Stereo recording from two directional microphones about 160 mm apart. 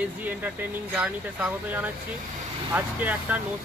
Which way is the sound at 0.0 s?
10° right (ahead or behind).